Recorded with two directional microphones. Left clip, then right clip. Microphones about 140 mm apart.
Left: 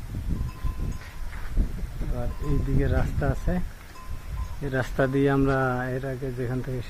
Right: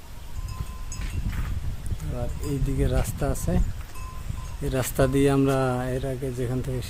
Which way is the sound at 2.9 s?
15° right (ahead or behind).